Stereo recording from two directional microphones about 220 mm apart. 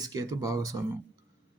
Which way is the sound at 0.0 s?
15° right (ahead or behind).